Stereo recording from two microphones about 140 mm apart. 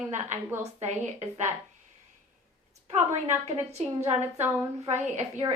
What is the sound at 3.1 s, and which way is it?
A woman's voice, 55° right (ahead or behind).